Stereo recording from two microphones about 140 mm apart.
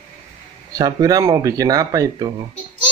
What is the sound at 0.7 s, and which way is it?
Speech, 25° right (ahead or behind).